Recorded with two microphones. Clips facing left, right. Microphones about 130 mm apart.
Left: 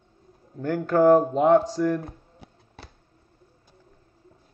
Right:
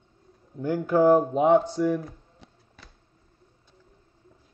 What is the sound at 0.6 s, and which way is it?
A man's voice, 10° right (ahead or behind).